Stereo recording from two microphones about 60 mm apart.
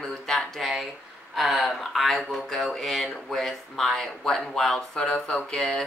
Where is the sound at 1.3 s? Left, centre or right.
Centre.